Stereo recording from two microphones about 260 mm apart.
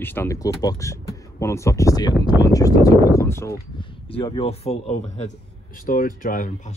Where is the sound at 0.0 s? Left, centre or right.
Centre.